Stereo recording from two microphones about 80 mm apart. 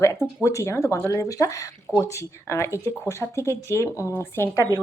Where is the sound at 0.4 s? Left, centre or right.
Left.